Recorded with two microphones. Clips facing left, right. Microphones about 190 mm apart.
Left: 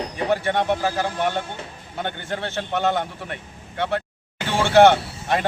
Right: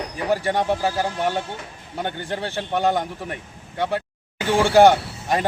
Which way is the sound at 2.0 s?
10° right (ahead or behind).